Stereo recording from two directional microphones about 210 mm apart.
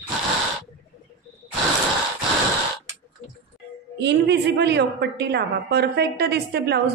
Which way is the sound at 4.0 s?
55° right (ahead or behind).